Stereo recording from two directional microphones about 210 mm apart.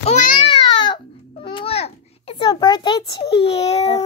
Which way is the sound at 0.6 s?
20° left (ahead or behind).